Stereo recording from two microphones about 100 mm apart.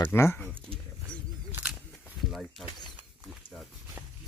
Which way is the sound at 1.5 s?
20° right (ahead or behind).